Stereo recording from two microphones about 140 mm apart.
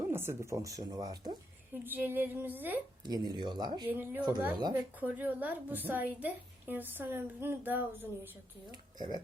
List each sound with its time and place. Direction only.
0.0 s speech: 15° right (ahead or behind)
1.8 s a woman's voice: 15° right (ahead or behind)
3.0 s speech: 30° right (ahead or behind)
3.8 s a woman's voice: 15° right (ahead or behind)
4.2 s speech: 30° right (ahead or behind)
4.9 s a woman's voice: 10° right (ahead or behind)
8.7 s speech: 30° right (ahead or behind)